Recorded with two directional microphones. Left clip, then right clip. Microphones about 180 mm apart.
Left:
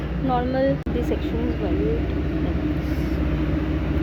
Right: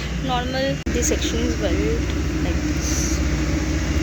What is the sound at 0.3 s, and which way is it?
Speech, 20° left (ahead or behind).